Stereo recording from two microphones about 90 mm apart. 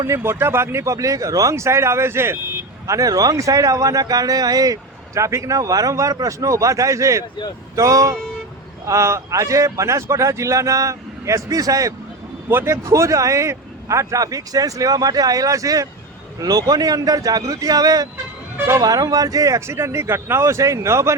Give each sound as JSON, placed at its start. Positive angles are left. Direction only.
{"t": 0.1, "sound": "speech", "side_deg": -30}
{"t": 2.8, "sound": "speech", "side_deg": -40}
{"t": 12.5, "sound": "speech", "side_deg": -25}
{"t": 18.5, "sound": "music", "side_deg": -30}
{"t": 18.8, "sound": "speech", "side_deg": -40}